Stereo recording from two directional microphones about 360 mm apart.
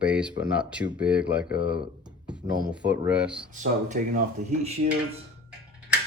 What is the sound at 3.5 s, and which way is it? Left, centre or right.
Speech, right.